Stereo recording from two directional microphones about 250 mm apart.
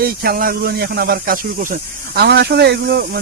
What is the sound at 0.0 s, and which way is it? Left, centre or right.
Speech, right.